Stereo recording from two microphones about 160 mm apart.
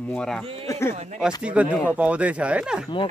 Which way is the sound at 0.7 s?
15° left (ahead or behind).